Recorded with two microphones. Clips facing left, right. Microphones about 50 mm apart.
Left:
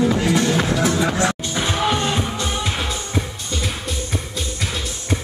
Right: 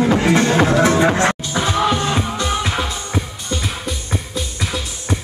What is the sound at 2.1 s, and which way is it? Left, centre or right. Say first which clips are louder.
Music: right 3 dB; right.